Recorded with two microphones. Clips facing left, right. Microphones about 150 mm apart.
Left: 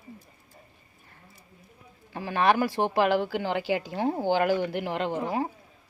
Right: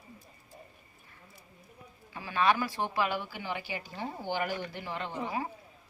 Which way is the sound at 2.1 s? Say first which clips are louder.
Left 4 dB; 55° left (ahead or behind).